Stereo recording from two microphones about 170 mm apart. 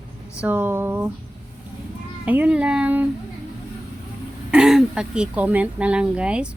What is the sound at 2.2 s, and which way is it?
Speech, 10° right (ahead or behind).